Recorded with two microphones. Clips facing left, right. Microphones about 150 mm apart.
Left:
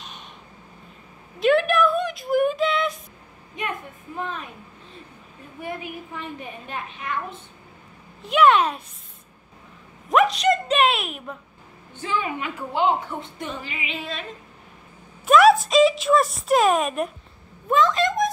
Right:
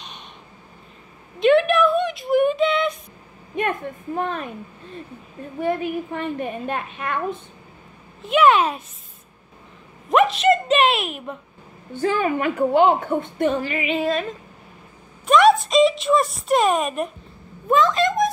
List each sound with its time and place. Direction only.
1.4 s a sound: centre (ahead or behind)
3.5 s a woman's voice: 55° right (ahead or behind)
5.6 s a woman's voice: 60° right (ahead or behind)
8.2 s a child's voice: centre (ahead or behind)
10.0 s a sound: centre (ahead or behind)
12.0 s a woman's voice: 55° right (ahead or behind)
15.2 s speech: centre (ahead or behind)